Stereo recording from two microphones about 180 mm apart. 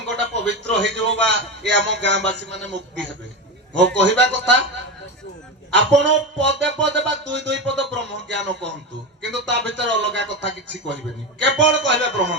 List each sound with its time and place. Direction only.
0.4 s a man's voice: 80° right
5.7 s a man's voice: 80° right